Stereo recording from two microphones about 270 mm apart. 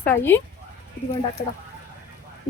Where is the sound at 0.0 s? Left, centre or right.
Centre.